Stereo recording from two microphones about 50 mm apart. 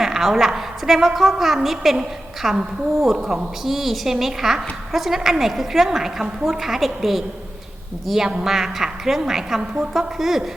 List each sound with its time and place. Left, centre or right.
0.0 s a woman's voice: centre
9.6 s a woman's voice: centre
9.9 s a woman's voice: centre